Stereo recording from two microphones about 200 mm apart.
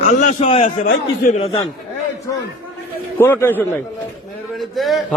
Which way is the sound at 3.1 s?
10° left (ahead or behind).